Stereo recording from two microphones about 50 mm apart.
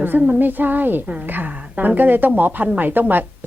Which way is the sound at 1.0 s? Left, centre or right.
Right.